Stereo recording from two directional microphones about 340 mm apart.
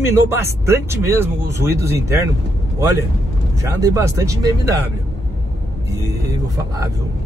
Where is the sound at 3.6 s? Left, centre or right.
Centre.